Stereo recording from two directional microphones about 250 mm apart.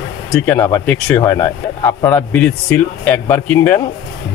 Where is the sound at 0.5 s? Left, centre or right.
Centre.